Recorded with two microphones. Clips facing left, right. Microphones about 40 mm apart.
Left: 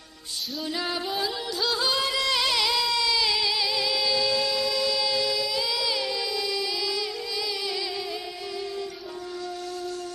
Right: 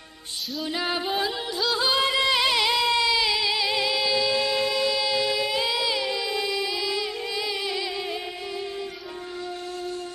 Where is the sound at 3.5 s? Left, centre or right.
Right.